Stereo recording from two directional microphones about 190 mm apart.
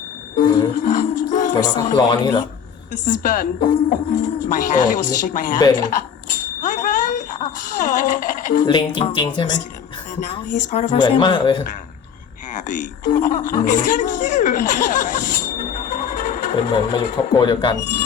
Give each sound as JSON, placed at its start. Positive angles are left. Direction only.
{"t": 0.3, "sound": "music", "side_deg": 45}
{"t": 2.0, "sound": "speech", "side_deg": 20}
{"t": 2.9, "sound": "speech", "side_deg": 45}
{"t": 5.5, "sound": "speech", "side_deg": 20}
{"t": 6.7, "sound": "speech", "side_deg": 45}
{"t": 8.6, "sound": "speech", "side_deg": 25}
{"t": 10.2, "sound": "speech", "side_deg": 35}
{"t": 11.0, "sound": "speech", "side_deg": 25}
{"t": 12.5, "sound": "speech", "side_deg": 45}
{"t": 16.9, "sound": "speech", "side_deg": 25}